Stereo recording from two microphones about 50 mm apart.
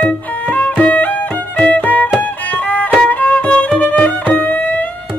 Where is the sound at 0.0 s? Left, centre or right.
Left.